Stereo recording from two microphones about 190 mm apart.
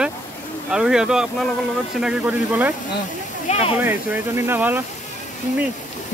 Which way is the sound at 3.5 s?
30° left (ahead or behind).